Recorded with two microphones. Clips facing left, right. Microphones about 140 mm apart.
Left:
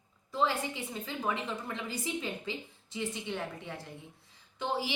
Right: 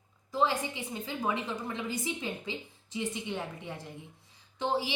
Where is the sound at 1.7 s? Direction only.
20° right (ahead or behind).